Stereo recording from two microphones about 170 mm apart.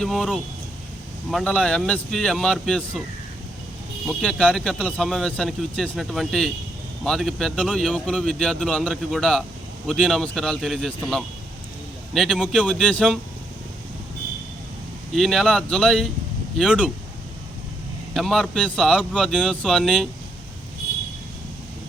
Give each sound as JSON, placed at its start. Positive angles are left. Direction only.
{"t": 0.0, "sound": "speech", "side_deg": 0}
{"t": 4.0, "sound": "speech", "side_deg": 5}
{"t": 15.1, "sound": "speech", "side_deg": 0}
{"t": 18.1, "sound": "speech", "side_deg": 0}